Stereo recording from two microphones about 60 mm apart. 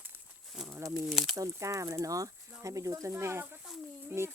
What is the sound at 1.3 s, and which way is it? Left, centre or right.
A child's voice, right.